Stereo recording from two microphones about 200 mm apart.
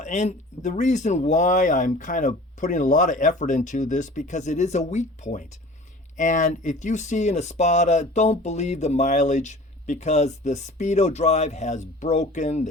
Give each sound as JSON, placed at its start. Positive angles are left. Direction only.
{"t": 0.0, "sound": "speech", "side_deg": 35}